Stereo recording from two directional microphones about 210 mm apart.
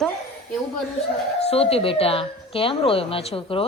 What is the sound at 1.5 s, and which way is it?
A woman's voice, 30° left (ahead or behind).